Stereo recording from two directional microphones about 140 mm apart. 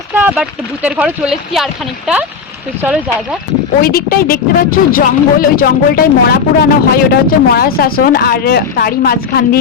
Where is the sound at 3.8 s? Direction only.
90° left.